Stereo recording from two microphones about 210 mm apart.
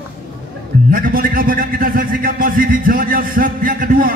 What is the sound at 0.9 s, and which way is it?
A man's voice, 40° right (ahead or behind).